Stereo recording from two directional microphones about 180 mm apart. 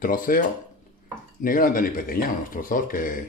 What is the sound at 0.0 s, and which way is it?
Speech, 50° left (ahead or behind).